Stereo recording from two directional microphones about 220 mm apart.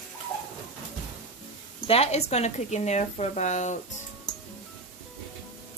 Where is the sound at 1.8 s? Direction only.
30° left (ahead or behind).